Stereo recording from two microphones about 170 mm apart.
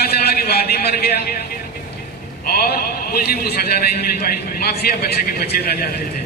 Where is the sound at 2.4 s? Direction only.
65° left (ahead or behind).